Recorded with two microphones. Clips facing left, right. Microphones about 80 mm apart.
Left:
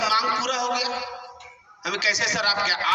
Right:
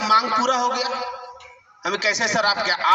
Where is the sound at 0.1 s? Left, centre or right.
Right.